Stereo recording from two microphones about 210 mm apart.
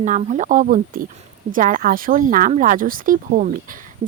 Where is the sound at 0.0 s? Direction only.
35° right (ahead or behind).